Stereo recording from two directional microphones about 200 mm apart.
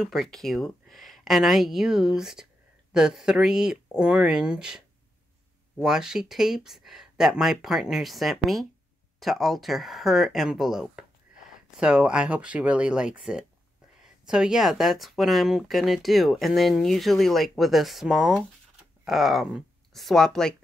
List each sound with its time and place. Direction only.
0.0 s speech: centre (ahead or behind)